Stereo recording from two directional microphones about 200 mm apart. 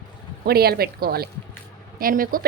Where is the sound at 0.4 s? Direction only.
50° right (ahead or behind).